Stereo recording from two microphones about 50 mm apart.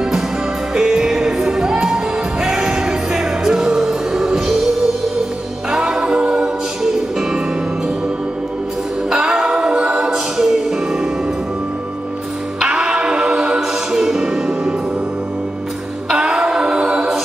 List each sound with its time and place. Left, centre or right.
0.7 s music: centre
5.7 s music: centre
9.1 s music: centre
12.5 s music: centre
16.1 s music: centre